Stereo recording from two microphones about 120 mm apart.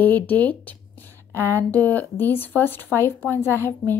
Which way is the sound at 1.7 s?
15° left (ahead or behind).